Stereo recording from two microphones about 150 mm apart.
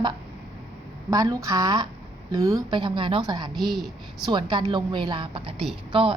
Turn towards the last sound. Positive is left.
turn(degrees=-35)  # may be behind; listen again after turning